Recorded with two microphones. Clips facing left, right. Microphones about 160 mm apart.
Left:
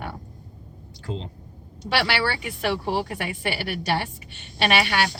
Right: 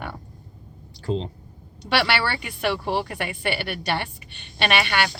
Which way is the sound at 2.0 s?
Centre (ahead or behind).